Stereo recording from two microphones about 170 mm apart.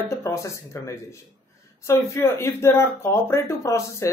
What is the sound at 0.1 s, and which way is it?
Speech, 15° left (ahead or behind).